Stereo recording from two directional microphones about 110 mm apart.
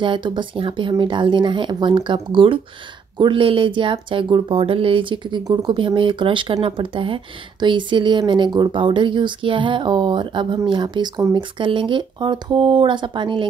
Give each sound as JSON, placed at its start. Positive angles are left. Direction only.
{"t": 0.0, "sound": "speech", "side_deg": -45}